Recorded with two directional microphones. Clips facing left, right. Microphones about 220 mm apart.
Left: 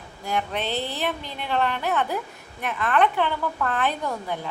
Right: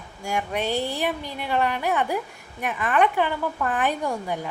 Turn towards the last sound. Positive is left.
turn(degrees=-15)  # may be behind; listen again after turning